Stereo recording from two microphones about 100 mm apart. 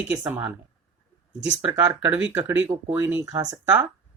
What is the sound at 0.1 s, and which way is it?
Speech, 15° right (ahead or behind).